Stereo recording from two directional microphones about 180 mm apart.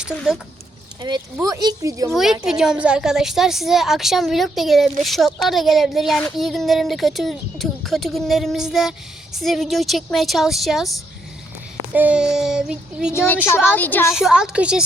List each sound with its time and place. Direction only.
1.0 s speech: 20° right (ahead or behind)
2.0 s a woman's voice: centre (ahead or behind)
11.9 s a woman's voice: 5° right (ahead or behind)
13.1 s a woman's voice: 10° left (ahead or behind)
14.1 s a woman's voice: centre (ahead or behind)